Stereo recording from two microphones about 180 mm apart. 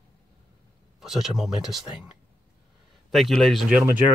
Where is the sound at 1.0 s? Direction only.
Centre (ahead or behind).